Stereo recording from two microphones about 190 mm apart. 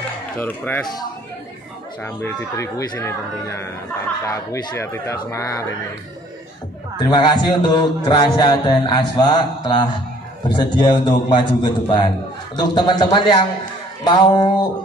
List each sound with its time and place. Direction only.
0.4 s speech: 10° left (ahead or behind)
2.0 s speech: 15° left (ahead or behind)
7.1 s mantra: 25° left (ahead or behind)